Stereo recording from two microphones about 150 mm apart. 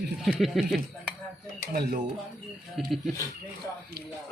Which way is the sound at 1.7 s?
90° right.